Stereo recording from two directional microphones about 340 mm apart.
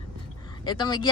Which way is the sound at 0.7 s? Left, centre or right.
Centre.